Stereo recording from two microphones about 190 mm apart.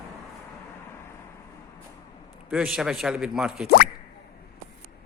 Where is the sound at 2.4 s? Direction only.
5° right (ahead or behind).